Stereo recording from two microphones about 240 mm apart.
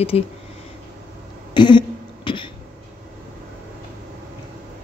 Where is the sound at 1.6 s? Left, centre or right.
Centre.